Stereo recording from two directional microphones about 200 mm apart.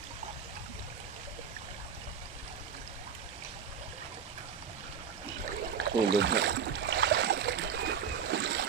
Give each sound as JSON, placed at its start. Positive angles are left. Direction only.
{"t": 5.7, "sound": "boat", "side_deg": -60}